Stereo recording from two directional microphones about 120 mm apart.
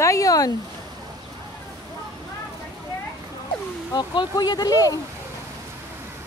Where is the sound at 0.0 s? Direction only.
30° left (ahead or behind).